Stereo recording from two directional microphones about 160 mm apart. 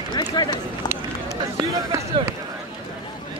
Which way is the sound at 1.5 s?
20° right (ahead or behind).